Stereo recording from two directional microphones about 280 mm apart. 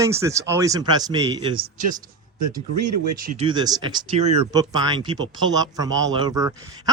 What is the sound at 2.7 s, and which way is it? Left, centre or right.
Speech, right.